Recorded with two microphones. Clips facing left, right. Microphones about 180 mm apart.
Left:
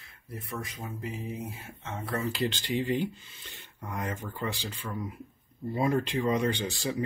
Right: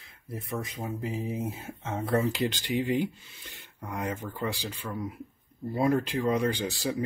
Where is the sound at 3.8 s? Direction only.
Centre (ahead or behind).